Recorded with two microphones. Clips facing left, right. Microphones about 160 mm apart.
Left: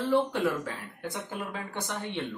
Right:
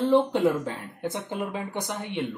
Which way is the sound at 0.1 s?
25° right (ahead or behind).